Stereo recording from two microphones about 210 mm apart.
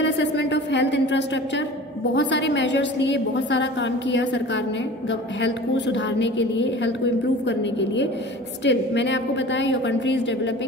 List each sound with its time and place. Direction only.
0.0 s a sound: 60° left (ahead or behind)
2.1 s a woman's voice: 55° left (ahead or behind)
5.4 s a woman's voice: 60° left (ahead or behind)